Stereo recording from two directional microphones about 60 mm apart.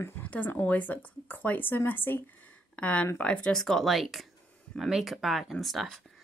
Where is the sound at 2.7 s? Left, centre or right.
Left.